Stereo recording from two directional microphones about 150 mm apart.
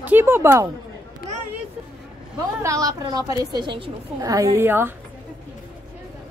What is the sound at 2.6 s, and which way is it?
A woman's voice, 20° right (ahead or behind).